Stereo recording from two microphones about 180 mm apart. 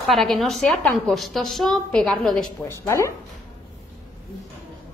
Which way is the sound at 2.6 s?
15° left (ahead or behind).